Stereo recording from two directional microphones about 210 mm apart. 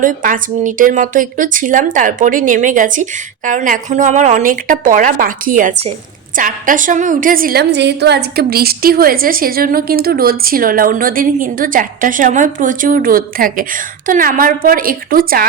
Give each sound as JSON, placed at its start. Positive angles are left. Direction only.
{"t": 0.0, "sound": "a woman's voice", "side_deg": -40}